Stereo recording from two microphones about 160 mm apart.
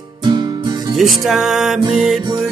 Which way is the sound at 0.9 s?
Centre (ahead or behind).